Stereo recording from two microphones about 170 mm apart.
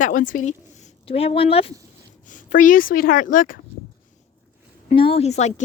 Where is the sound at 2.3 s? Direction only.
50° left (ahead or behind).